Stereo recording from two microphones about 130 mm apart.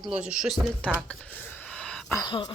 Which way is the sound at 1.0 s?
10° left (ahead or behind).